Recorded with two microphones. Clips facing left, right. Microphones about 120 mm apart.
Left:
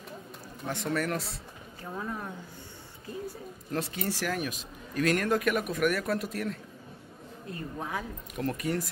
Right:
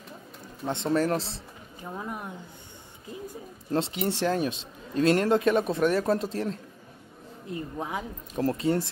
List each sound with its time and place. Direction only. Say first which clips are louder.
0.7 s speech: right 5 dB; 25° right (ahead or behind)
1.8 s speech: right 1 dB; 20° right (ahead or behind)
3.7 s speech: right 5 dB; 25° right (ahead or behind)